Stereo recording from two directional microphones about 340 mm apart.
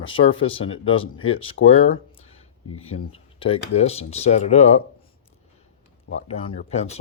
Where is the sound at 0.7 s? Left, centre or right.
Left.